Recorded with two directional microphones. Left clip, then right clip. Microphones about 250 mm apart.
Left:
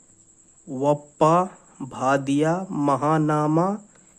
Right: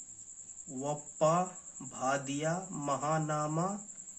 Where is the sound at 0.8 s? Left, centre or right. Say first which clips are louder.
Left 12 dB; left.